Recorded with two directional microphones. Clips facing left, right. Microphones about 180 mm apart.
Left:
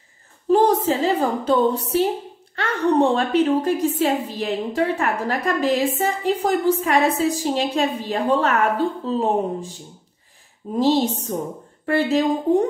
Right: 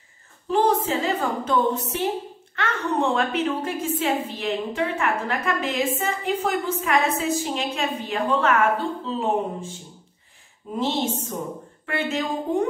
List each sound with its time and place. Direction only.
0.5 s a sound: 40° left (ahead or behind)
2.5 s a woman's voice: 35° left (ahead or behind)
10.8 s a woman's voice: 35° left (ahead or behind)